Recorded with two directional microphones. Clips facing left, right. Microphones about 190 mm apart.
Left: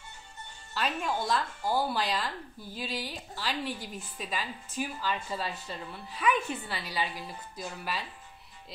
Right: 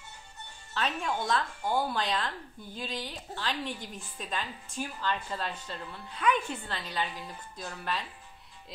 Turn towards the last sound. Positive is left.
turn(degrees=5)  # may be behind; listen again after turning